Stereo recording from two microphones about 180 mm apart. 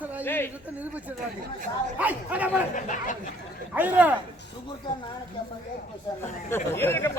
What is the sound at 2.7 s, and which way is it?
Speech, 45° left (ahead or behind).